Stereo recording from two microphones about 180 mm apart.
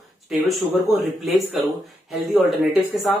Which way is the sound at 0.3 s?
Centre (ahead or behind).